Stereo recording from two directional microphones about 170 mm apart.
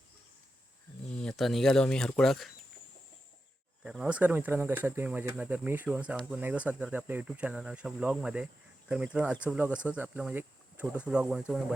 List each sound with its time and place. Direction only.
1.1 s speech: 5° left (ahead or behind)
3.8 s speech: 5° right (ahead or behind)